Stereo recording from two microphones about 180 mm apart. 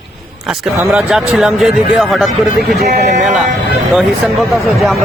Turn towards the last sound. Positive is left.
turn(degrees=0)  # may be behind; listen again after turning